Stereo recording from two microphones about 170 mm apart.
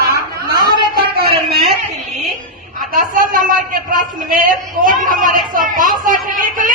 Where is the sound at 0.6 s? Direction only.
25° right (ahead or behind).